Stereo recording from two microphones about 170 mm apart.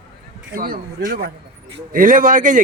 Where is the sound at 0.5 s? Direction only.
60° right (ahead or behind).